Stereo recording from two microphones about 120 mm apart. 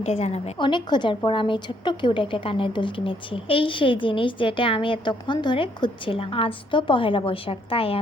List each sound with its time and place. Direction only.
0.0 s a woman's voice: 60° left (ahead or behind)
0.6 s a woman's voice: 40° left (ahead or behind)